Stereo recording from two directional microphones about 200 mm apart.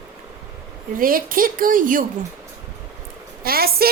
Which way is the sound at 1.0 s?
45° right (ahead or behind).